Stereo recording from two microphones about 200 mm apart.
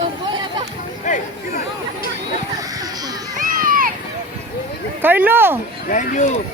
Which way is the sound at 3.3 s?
45° right (ahead or behind).